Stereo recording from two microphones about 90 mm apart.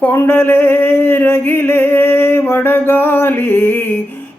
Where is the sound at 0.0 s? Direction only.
20° left (ahead or behind).